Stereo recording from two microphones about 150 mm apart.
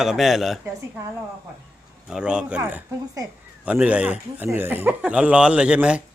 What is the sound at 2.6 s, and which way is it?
Speech, 15° right (ahead or behind).